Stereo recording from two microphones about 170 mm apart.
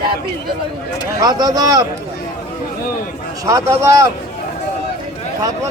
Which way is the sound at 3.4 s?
20° right (ahead or behind).